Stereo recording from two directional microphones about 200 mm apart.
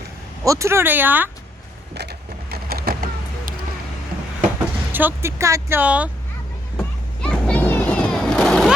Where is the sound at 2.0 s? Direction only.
55° right (ahead or behind).